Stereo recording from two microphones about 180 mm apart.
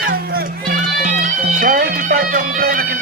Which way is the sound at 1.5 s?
50° right (ahead or behind).